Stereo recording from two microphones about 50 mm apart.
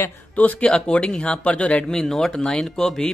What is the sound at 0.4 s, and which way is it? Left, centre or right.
Speech, left.